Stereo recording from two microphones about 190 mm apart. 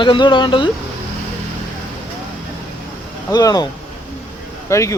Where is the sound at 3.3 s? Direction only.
20° left (ahead or behind).